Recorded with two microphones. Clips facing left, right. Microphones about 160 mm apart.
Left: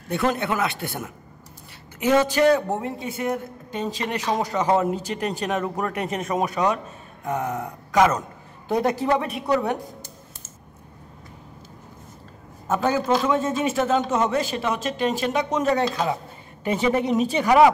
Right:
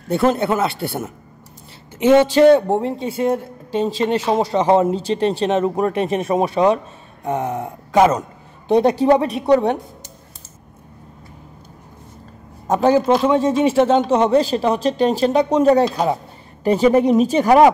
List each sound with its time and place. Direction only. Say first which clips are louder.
0.1 s a man's voice: right 6 dB; 30° right (ahead or behind)
12.6 s a man's voice: right 7 dB; 30° right (ahead or behind)